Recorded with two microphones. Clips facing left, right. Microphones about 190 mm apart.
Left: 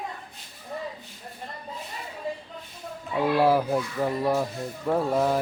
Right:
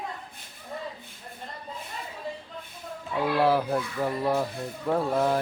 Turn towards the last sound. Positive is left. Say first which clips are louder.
# left 1 dB
turn(degrees=5)  # may be behind; listen again after turning